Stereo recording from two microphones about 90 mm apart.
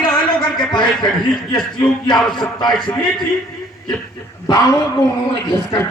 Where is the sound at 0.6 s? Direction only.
55° left (ahead or behind).